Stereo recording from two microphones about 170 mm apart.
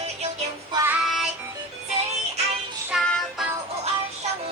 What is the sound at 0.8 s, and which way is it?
Music, 5° right (ahead or behind).